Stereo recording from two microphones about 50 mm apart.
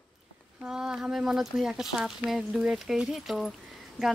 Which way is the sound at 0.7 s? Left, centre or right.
Centre.